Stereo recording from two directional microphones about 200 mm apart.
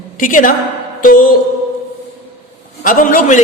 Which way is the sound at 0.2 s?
40° left (ahead or behind).